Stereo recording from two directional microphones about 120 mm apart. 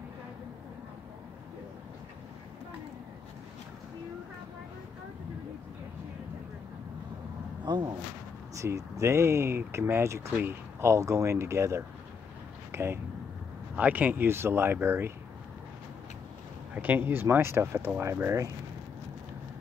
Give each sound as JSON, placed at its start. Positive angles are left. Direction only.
{"t": 7.6, "sound": "speech", "side_deg": -35}
{"t": 8.5, "sound": "speech", "side_deg": -25}
{"t": 16.7, "sound": "speech", "side_deg": -15}